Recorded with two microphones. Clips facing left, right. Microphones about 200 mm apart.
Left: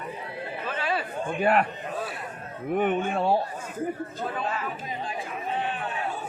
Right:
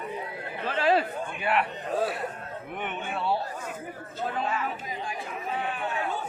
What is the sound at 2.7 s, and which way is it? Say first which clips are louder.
Speech: left 10 dB; 40° left (ahead or behind).